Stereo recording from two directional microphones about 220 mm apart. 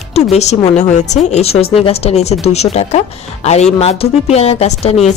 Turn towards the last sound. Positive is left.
turn(degrees=30)  # may be behind; listen again after turning